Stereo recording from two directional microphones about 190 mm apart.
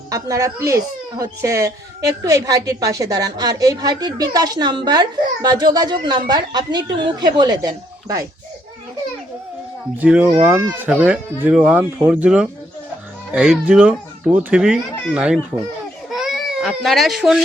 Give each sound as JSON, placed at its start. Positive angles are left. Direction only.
{"t": 0.1, "sound": "a woman's voice", "side_deg": -15}
{"t": 10.0, "sound": "speech", "side_deg": -5}
{"t": 16.1, "sound": "baby cry", "side_deg": 0}